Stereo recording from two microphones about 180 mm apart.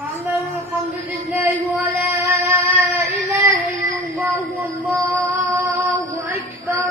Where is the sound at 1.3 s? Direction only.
10° right (ahead or behind).